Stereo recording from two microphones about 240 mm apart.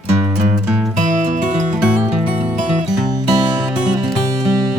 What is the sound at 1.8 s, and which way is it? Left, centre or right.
Music, centre.